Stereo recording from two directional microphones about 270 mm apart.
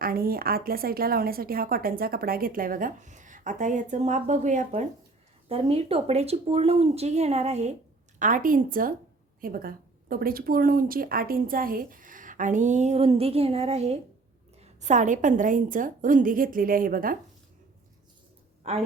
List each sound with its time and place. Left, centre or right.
0.0 s a woman's voice: right
18.6 s a woman's voice: right